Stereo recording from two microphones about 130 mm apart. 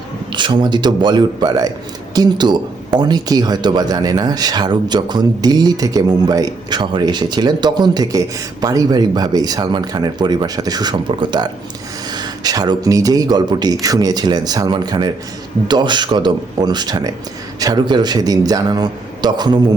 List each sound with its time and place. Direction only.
0.3 s speech: 35° right (ahead or behind)